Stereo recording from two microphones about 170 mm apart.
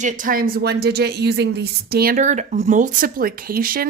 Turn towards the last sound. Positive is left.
turn(degrees=-60)  # may be behind; listen again after turning